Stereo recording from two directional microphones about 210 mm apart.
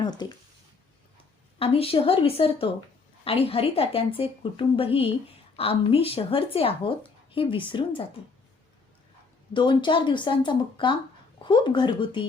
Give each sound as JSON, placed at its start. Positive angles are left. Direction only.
{"t": 0.0, "sound": "speech", "side_deg": 20}
{"t": 1.5, "sound": "speech", "side_deg": 25}
{"t": 9.5, "sound": "speech", "side_deg": 20}